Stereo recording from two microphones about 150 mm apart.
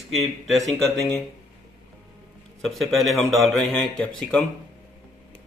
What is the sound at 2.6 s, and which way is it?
Speech, centre (ahead or behind).